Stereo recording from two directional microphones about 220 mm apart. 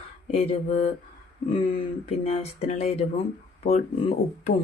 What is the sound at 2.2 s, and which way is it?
Speech, 30° left (ahead or behind).